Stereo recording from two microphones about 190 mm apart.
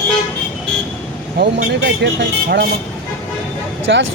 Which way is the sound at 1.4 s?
60° right (ahead or behind).